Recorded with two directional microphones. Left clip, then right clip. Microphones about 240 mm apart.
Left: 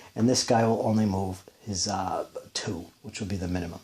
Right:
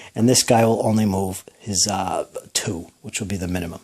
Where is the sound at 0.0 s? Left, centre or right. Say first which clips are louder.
Right 7 dB; right.